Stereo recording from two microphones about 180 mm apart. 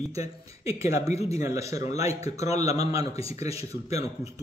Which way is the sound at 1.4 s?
15° right (ahead or behind).